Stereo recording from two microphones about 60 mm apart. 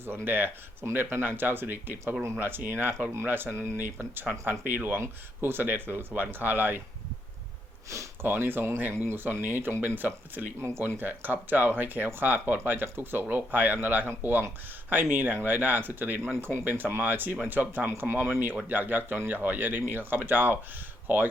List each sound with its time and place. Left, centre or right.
0.3 s speech: right
8.2 s speech: right
10.6 s speech: right
11.0 s speech: right